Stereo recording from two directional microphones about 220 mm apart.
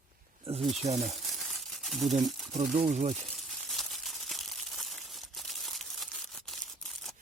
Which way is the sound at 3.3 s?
Centre (ahead or behind).